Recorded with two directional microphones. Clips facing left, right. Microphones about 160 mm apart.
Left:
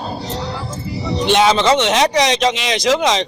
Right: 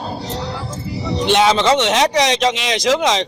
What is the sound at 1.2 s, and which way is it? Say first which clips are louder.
Speech: left 1 dB; 15° left (ahead or behind).